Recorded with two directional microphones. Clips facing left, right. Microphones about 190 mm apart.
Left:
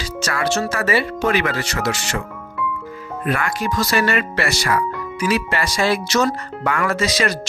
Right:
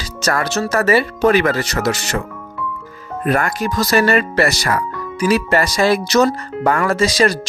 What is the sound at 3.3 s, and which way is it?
Speech, 45° right (ahead or behind).